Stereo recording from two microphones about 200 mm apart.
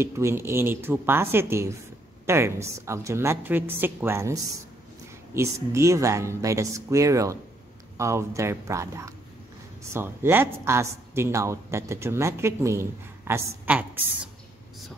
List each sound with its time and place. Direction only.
0.0 s speech: 15° right (ahead or behind)